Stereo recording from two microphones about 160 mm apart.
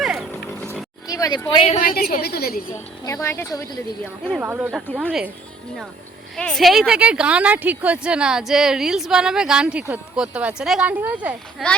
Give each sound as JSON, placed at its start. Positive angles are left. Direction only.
{"t": 0.0, "sound": "vehicle", "side_deg": 0}
{"t": 0.3, "sound": "vehicle", "side_deg": 10}
{"t": 1.0, "sound": "speech", "side_deg": 20}
{"t": 1.8, "sound": "a woman's voice", "side_deg": 70}
{"t": 3.0, "sound": "speech", "side_deg": 20}
{"t": 4.4, "sound": "speech", "side_deg": -10}
{"t": 6.3, "sound": "speech", "side_deg": 5}